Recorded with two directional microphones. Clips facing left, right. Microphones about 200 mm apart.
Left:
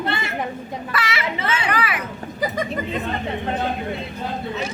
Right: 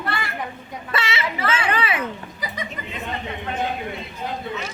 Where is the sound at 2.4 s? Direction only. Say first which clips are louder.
Left 9 dB; 45° left (ahead or behind).